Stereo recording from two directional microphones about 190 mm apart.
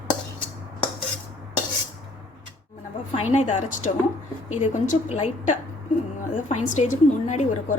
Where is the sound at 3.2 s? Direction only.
35° left (ahead or behind).